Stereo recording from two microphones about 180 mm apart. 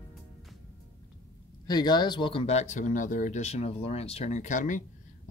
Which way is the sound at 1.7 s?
25° left (ahead or behind).